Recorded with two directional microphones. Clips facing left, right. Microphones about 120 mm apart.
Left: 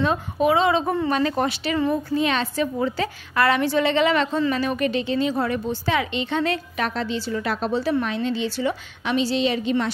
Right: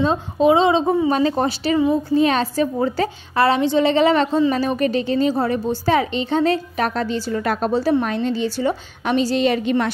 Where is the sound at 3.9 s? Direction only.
35° right (ahead or behind); by 9.9 s 55° right (ahead or behind).